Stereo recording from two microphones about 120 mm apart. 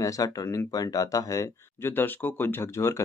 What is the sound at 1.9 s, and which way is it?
Speech, 15° left (ahead or behind).